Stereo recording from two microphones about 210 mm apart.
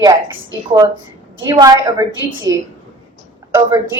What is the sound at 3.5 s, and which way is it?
Speech, 10° right (ahead or behind).